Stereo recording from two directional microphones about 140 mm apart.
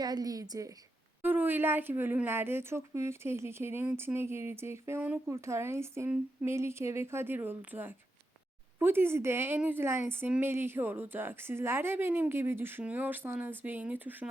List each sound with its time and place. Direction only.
0.0 s a woman's voice: 25° right (ahead or behind)
1.2 s speech: 15° right (ahead or behind)